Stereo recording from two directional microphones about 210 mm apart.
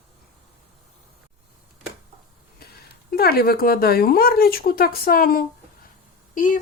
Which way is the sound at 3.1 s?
50° left (ahead or behind).